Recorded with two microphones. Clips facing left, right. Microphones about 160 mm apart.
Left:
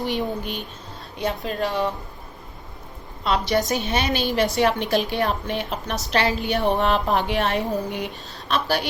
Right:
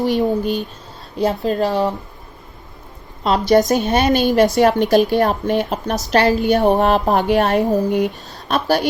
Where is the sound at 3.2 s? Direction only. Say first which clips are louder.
Right 8 dB; 40° right (ahead or behind).